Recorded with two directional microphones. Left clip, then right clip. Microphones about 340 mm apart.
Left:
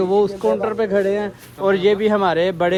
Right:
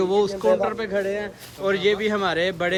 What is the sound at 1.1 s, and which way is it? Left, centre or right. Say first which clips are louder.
Speech: left 6 dB; left.